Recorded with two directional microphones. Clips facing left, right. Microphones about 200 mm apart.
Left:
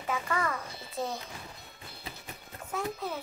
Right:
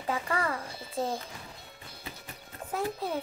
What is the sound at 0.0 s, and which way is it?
Speech, 30° right (ahead or behind).